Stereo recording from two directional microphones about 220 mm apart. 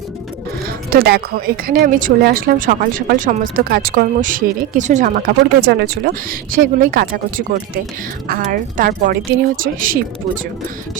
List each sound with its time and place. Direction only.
0.9 s speech: 45° right (ahead or behind)